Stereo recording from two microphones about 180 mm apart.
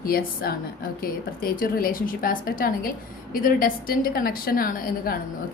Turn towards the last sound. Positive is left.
turn(degrees=50)  # may be behind; listen again after turning